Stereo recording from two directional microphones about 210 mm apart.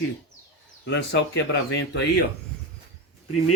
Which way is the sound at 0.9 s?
60° left (ahead or behind).